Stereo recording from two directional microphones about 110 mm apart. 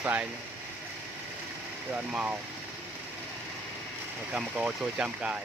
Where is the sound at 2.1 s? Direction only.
10° right (ahead or behind).